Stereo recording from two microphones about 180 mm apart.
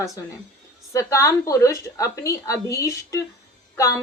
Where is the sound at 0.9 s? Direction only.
15° left (ahead or behind).